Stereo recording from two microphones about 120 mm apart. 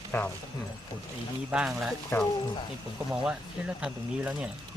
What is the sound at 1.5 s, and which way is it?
Speech, 5° right (ahead or behind).